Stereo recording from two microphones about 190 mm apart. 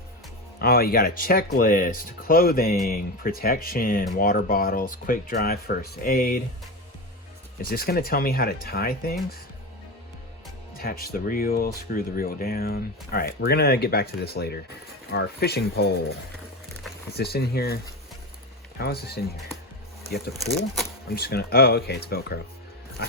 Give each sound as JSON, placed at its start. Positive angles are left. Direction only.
{"t": 0.6, "sound": "speech", "side_deg": 50}
{"t": 7.6, "sound": "speech", "side_deg": 50}
{"t": 10.8, "sound": "speech", "side_deg": 50}
{"t": 17.2, "sound": "speech", "side_deg": 55}
{"t": 18.8, "sound": "speech", "side_deg": 55}